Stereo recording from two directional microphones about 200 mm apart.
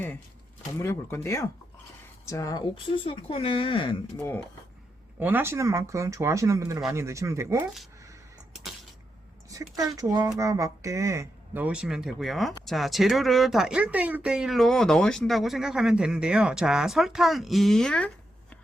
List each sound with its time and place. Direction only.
0.8 s speech: 15° left (ahead or behind)
5.2 s speech: 10° right (ahead or behind)
9.5 s speech: 15° right (ahead or behind); by 18.1 s 5° left (ahead or behind)